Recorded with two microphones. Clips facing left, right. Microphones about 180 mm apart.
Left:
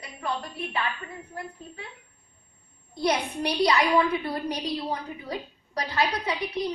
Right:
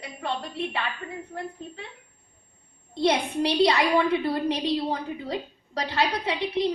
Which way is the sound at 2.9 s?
25° right (ahead or behind).